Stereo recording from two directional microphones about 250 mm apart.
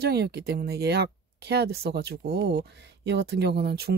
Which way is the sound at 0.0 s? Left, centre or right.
Right.